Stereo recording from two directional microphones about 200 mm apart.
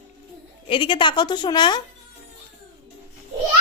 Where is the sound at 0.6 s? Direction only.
25° left (ahead or behind).